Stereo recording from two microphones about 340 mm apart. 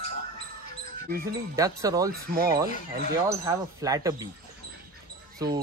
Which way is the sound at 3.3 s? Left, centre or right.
Centre.